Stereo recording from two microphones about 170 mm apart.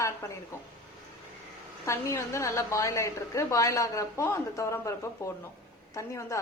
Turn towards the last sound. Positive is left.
turn(degrees=15)  # may be behind; listen again after turning